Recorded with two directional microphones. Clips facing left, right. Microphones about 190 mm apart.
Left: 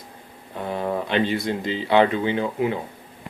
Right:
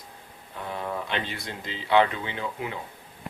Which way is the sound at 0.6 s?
35° left (ahead or behind).